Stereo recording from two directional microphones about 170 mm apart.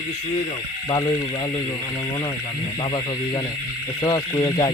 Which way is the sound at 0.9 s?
25° left (ahead or behind).